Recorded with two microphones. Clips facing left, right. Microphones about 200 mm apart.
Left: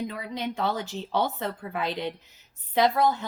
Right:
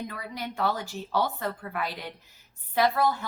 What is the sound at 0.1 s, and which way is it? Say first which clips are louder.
Speech: left 4 dB; 20° left (ahead or behind).